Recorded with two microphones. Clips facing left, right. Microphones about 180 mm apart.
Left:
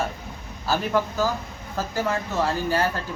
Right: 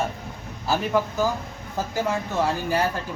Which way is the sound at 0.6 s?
15° right (ahead or behind).